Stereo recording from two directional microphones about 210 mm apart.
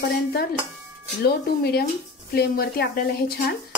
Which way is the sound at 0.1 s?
45° left (ahead or behind).